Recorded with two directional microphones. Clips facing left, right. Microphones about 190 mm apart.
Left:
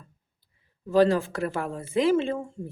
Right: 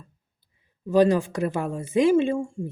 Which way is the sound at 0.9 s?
15° right (ahead or behind).